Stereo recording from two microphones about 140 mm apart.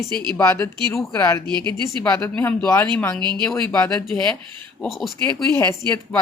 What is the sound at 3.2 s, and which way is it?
Speech, 30° right (ahead or behind).